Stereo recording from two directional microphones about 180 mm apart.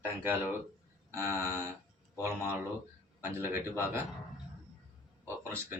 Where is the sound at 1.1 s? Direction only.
15° right (ahead or behind).